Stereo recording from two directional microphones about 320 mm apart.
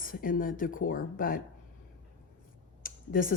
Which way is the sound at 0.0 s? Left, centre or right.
Left.